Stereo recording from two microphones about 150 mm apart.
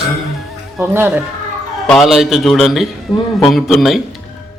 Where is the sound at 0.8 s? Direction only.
15° right (ahead or behind).